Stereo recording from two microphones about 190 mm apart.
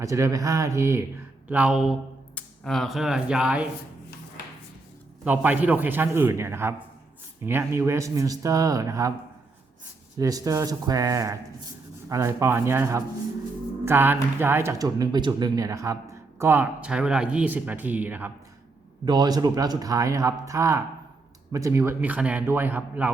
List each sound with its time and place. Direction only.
0.0 s speech: 15° right (ahead or behind)
5.2 s speech: 10° right (ahead or behind)
10.2 s speech: 20° right (ahead or behind)
19.0 s speech: 20° right (ahead or behind)